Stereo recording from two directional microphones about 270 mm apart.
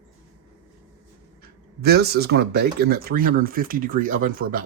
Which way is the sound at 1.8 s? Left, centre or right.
Right.